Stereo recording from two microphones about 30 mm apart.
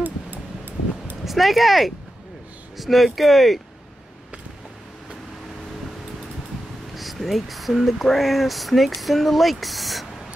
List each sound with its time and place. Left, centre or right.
0.0 s a sound: right
1.2 s speech: centre
7.0 s speech: centre